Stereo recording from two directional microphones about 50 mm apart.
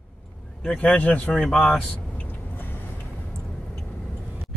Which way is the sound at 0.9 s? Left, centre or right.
Left.